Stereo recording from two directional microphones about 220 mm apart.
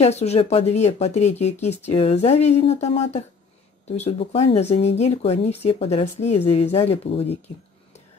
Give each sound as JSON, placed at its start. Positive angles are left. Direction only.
{"t": 0.0, "sound": "speech", "side_deg": 30}